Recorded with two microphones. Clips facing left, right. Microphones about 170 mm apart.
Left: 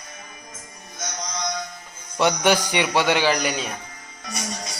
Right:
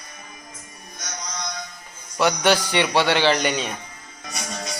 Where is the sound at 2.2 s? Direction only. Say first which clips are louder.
Even; 20° left (ahead or behind); by 3.8 s centre (ahead or behind).